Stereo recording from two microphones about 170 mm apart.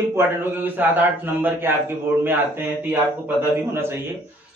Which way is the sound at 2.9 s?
10° right (ahead or behind).